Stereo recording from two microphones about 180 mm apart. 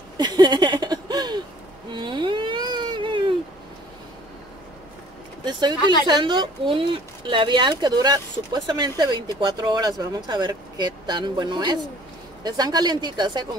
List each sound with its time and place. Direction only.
0.2 s a sound: 25° right (ahead or behind)
1.9 s baby cry: 25° right (ahead or behind)
5.4 s speech: 25° right (ahead or behind)